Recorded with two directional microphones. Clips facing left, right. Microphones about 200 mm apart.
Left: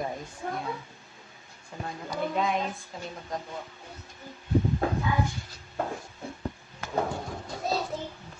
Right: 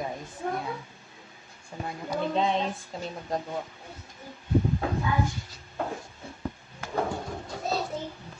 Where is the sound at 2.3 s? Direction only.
30° right (ahead or behind).